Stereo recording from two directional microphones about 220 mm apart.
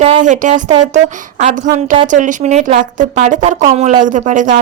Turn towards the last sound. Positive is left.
turn(degrees=-35)  # may be behind; listen again after turning